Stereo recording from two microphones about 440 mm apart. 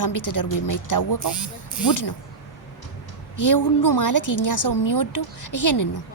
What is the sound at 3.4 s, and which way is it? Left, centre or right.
A woman's voice, left.